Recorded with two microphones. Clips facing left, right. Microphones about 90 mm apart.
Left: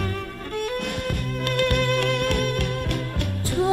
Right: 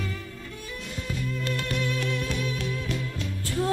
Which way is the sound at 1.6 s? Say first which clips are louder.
Left 12 dB; 65° left (ahead or behind).